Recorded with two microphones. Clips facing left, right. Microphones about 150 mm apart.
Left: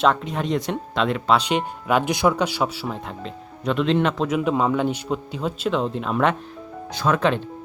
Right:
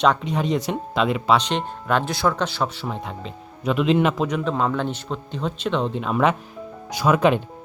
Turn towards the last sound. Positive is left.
turn(degrees=-10)  # may be behind; listen again after turning